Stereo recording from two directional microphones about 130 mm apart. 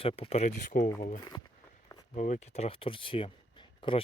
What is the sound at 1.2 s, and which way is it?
Speech, 30° left (ahead or behind).